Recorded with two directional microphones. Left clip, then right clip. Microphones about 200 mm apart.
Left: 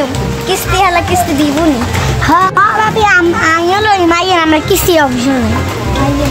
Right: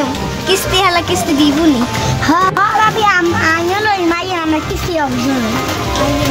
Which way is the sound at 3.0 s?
35° left (ahead or behind).